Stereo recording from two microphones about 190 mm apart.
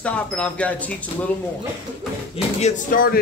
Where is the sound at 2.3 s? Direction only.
40° left (ahead or behind).